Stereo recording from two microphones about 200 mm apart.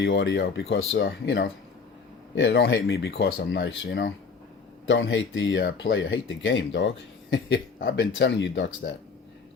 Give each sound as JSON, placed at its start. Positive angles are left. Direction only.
{"t": 0.0, "sound": "speech", "side_deg": 65}